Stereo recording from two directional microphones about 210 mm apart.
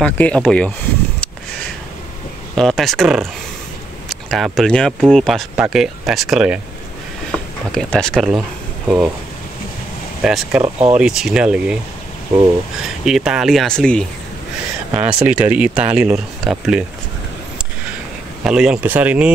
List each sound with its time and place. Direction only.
0.0 s speech: 5° left (ahead or behind)
2.5 s speech: centre (ahead or behind)
7.7 s speech: 5° left (ahead or behind)
10.2 s speech: centre (ahead or behind)
10.6 s speech: 30° right (ahead or behind)
11.0 s speech: centre (ahead or behind)
12.8 s speech: centre (ahead or behind)
14.9 s speech: 5° right (ahead or behind)
18.4 s speech: 5° right (ahead or behind)